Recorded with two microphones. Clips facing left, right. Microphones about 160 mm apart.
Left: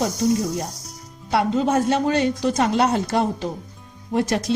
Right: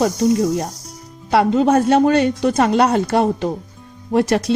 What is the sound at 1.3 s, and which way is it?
A woman's voice, 70° right (ahead or behind).